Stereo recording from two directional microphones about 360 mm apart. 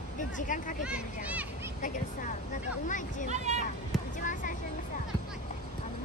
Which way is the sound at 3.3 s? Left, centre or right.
Centre.